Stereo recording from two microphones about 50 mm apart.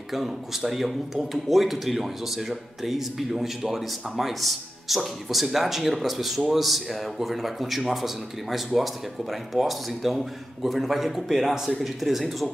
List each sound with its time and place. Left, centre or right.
0.1 s speech: centre